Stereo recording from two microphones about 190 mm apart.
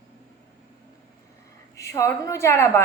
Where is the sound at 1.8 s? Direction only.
15° left (ahead or behind).